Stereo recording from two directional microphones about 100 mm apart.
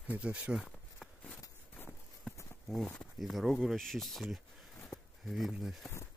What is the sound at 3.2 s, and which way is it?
Speech, centre (ahead or behind).